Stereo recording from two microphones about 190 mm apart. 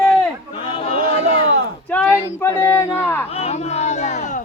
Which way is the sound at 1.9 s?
10° left (ahead or behind).